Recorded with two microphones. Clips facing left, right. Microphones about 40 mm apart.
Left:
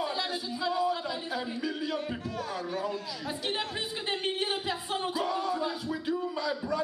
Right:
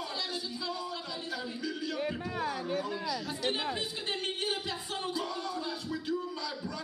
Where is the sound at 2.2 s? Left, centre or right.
Right.